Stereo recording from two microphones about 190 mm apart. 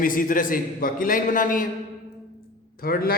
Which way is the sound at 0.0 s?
45° left (ahead or behind).